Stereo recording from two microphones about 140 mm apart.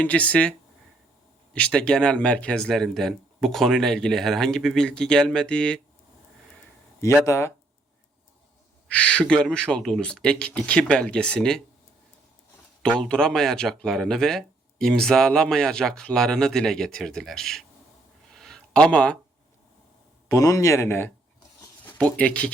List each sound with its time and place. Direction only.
0.0 s speech: 10° left (ahead or behind)
1.5 s speech: 5° left (ahead or behind)
7.0 s speech: 20° left (ahead or behind)
8.9 s speech: 10° left (ahead or behind)
12.8 s speech: 5° left (ahead or behind)
18.3 s a sound: 5° left (ahead or behind)
20.2 s speech: 25° left (ahead or behind); by 22.5 s 10° left (ahead or behind)